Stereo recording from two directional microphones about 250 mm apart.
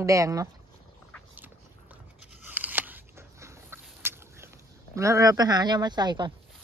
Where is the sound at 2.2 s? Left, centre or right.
Centre.